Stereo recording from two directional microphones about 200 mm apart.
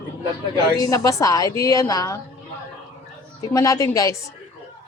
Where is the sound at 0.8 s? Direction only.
15° left (ahead or behind).